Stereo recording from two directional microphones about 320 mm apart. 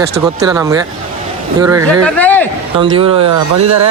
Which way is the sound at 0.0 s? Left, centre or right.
Centre.